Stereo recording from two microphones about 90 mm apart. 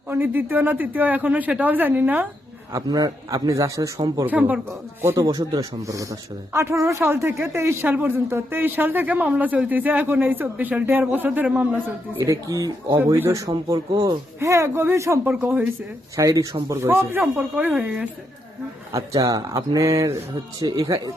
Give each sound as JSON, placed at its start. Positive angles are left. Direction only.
{"t": 0.1, "sound": "a woman's voice", "side_deg": -25}
{"t": 2.8, "sound": "speech", "side_deg": -45}
{"t": 4.3, "sound": "speech", "side_deg": -15}
{"t": 5.1, "sound": "a woman's voice", "side_deg": -40}
{"t": 12.2, "sound": "speech", "side_deg": -40}
{"t": 14.3, "sound": "a woman's voice", "side_deg": -30}
{"t": 16.1, "sound": "a woman's voice", "side_deg": -40}
{"t": 18.9, "sound": "speech", "side_deg": -40}